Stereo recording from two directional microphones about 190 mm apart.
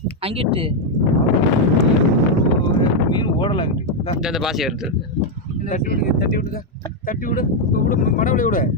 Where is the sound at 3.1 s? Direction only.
25° left (ahead or behind).